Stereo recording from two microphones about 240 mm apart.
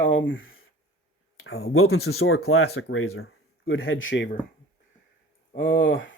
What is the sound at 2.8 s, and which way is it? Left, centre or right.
Speech, left.